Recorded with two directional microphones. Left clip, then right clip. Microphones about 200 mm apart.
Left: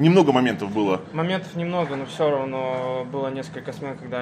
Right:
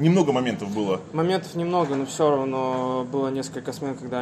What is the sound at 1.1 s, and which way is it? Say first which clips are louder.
Speech: right 2 dB; 55° right (ahead or behind).